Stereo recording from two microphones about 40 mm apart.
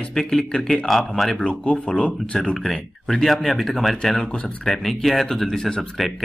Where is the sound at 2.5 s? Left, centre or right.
Centre.